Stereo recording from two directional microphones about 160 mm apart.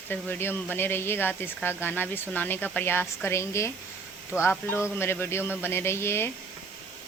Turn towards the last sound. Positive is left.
turn(degrees=15)  # may be behind; listen again after turning